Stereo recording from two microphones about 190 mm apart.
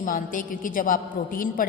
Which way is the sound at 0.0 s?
45° left (ahead or behind).